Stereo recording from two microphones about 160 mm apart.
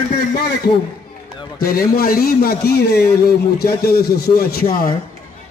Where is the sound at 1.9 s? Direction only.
70° left (ahead or behind).